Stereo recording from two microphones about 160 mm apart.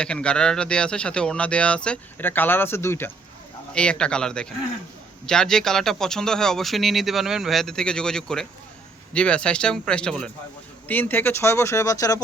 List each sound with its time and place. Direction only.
0.0 s a man's voice: 5° left (ahead or behind); by 12.2 s 20° left (ahead or behind)